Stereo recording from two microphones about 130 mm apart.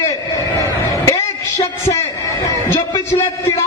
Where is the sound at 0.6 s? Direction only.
25° left (ahead or behind).